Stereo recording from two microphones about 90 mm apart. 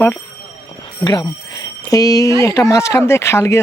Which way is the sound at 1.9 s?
40° left (ahead or behind).